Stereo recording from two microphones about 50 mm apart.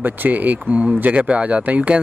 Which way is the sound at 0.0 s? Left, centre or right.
Right.